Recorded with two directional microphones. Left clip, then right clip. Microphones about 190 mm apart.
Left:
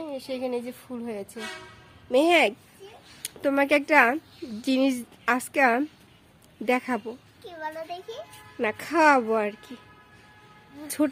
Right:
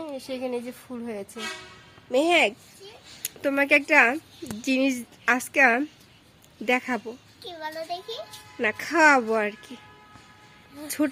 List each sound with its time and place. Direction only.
0.0 s a child's voice: centre (ahead or behind)
2.0 s a woman's voice: 20° left (ahead or behind); by 9.6 s centre (ahead or behind)
10.8 s a child's voice: 5° left (ahead or behind)